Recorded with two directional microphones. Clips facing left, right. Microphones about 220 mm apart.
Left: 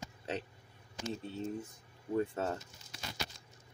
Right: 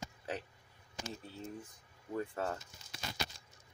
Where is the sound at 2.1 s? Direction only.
25° left (ahead or behind).